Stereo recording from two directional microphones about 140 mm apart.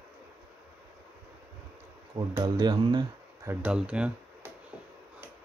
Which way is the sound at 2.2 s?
35° right (ahead or behind).